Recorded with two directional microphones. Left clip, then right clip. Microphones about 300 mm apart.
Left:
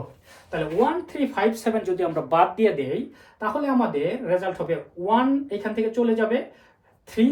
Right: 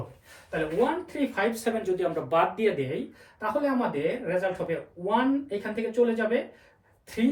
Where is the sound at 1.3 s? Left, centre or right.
Left.